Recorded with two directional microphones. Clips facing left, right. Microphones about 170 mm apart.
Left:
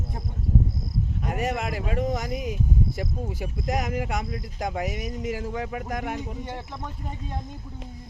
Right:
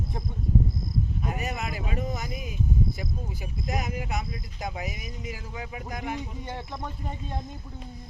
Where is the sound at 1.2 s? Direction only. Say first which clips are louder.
Left 4 dB; 75° left (ahead or behind).